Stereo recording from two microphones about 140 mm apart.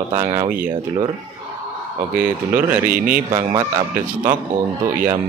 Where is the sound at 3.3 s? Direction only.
25° right (ahead or behind).